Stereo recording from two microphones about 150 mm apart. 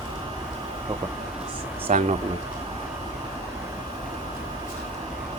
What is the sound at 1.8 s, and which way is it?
Speech, 45° right (ahead or behind).